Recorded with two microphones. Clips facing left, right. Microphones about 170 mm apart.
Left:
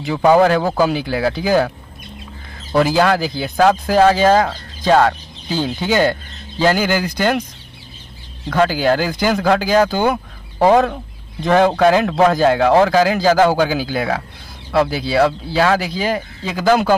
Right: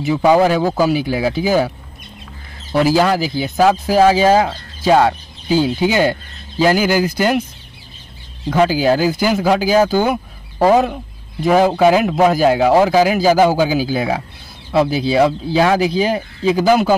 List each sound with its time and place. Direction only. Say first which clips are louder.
0.1 s speech: even; 5° right (ahead or behind)
2.7 s speech: right 1 dB; 5° right (ahead or behind)
8.5 s speech: right 2 dB; 10° right (ahead or behind)